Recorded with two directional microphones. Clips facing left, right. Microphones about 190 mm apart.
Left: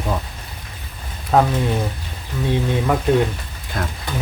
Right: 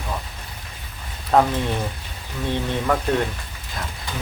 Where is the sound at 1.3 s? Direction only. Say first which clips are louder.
Left 1 dB; 5° left (ahead or behind).